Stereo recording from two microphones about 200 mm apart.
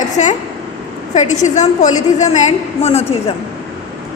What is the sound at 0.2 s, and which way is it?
A woman's voice, 35° left (ahead or behind).